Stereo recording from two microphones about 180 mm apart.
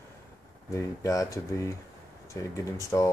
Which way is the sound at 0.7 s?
15° left (ahead or behind).